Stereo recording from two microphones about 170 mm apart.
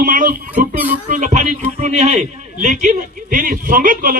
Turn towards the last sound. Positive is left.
turn(degrees=-55)  # may be behind; listen again after turning